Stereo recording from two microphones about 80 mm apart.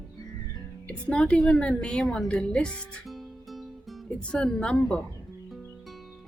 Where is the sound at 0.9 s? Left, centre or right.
Centre.